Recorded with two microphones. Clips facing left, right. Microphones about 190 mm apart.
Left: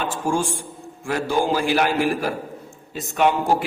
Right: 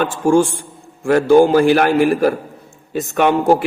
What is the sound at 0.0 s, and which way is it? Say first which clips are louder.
A man's voice: right 9 dB; 60° right (ahead or behind).